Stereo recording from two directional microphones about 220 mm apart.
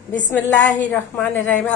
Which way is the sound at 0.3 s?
5° left (ahead or behind).